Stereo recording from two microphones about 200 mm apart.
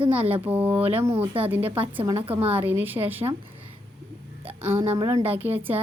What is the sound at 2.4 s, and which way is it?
Speech, 10° right (ahead or behind).